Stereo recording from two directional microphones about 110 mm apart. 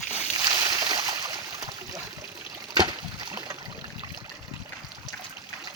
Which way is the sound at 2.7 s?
45° right (ahead or behind).